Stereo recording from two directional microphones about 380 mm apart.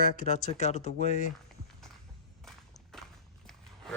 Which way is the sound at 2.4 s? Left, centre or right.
Centre.